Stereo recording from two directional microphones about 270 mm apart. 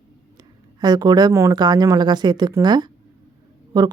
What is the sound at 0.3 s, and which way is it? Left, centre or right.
Speech, centre.